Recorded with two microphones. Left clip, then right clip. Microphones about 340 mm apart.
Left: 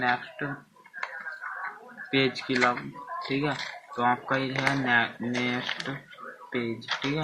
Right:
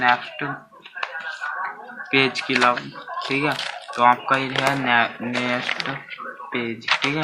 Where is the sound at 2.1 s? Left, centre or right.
Centre.